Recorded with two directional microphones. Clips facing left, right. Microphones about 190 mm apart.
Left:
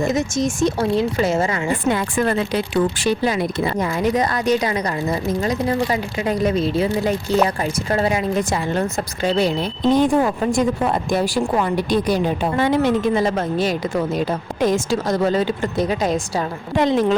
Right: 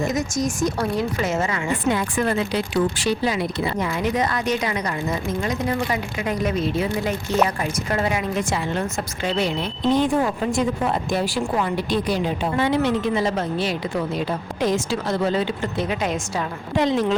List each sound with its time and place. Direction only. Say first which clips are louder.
0.0 s speech: left 3 dB; 25° left (ahead or behind)
1.9 s a woman's voice: left 2 dB; 55° left (ahead or behind); by 16.5 s 35° left (ahead or behind)
16.7 s speech: left 3 dB; 50° left (ahead or behind)